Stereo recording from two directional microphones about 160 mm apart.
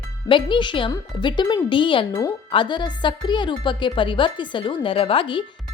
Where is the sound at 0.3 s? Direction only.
30° left (ahead or behind).